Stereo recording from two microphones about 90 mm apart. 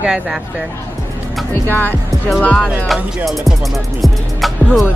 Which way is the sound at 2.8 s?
Centre (ahead or behind).